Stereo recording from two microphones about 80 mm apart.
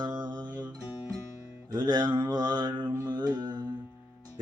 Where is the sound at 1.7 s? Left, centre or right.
Right.